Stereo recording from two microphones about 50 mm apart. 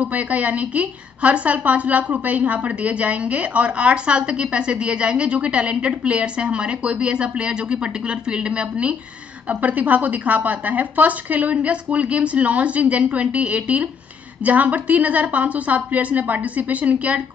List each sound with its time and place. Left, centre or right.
0.0 s a woman's voice: right